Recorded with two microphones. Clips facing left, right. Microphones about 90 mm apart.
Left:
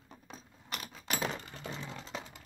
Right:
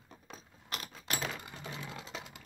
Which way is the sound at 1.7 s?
10° right (ahead or behind).